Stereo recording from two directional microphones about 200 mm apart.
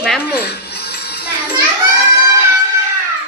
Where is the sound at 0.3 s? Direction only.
55° left (ahead or behind).